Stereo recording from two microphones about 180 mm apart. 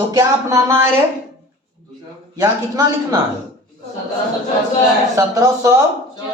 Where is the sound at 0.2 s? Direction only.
15° right (ahead or behind).